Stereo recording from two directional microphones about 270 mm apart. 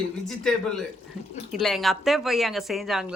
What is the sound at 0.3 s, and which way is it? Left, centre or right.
A woman's voice, centre.